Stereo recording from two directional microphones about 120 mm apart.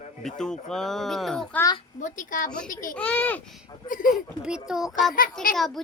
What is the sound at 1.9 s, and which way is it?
Speech, 90° left.